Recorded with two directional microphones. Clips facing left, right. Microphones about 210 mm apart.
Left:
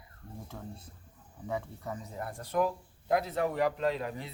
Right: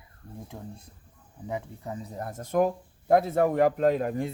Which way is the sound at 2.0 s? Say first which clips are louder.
Right 4 dB; 40° right (ahead or behind).